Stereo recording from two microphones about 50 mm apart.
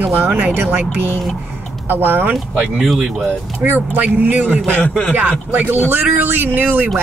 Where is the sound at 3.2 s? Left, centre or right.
Right.